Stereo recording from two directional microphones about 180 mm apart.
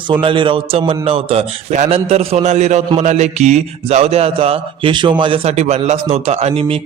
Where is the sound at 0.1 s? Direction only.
30° right (ahead or behind).